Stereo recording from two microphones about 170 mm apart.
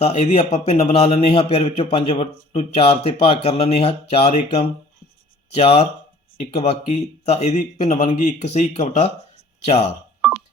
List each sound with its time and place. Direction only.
0.0 s a man's voice: 40° left (ahead or behind)
5.5 s a man's voice: 35° left (ahead or behind)